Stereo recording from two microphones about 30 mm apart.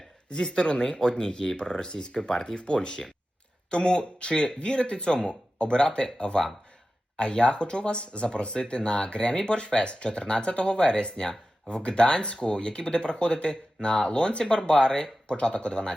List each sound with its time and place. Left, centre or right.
0.3 s speech: left
2.6 s speech: left